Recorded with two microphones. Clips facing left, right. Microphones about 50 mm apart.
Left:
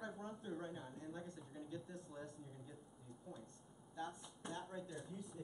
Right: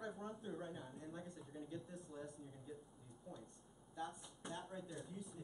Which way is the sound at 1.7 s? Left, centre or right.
Centre.